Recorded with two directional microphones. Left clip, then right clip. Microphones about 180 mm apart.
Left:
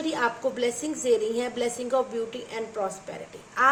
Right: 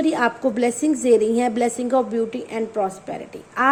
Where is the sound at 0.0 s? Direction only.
40° right (ahead or behind).